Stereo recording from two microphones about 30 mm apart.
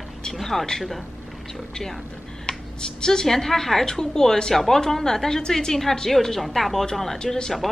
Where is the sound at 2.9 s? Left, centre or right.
Left.